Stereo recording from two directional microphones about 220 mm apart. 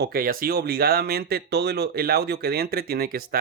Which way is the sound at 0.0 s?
45° right (ahead or behind).